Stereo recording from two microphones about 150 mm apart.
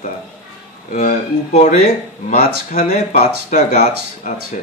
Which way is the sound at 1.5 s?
45° left (ahead or behind).